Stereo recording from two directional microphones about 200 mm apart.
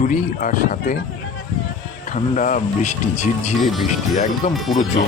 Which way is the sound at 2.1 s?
40° left (ahead or behind).